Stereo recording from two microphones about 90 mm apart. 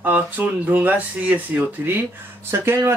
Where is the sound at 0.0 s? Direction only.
20° right (ahead or behind).